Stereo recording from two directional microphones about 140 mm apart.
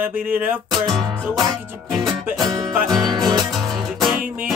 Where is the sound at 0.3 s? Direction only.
15° right (ahead or behind).